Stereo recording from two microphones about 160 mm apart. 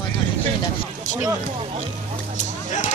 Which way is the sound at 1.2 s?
35° right (ahead or behind).